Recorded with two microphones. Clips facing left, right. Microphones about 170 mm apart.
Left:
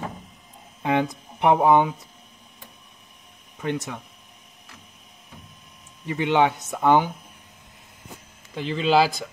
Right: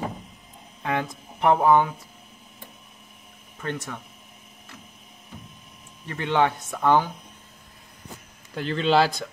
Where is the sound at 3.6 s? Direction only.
15° left (ahead or behind).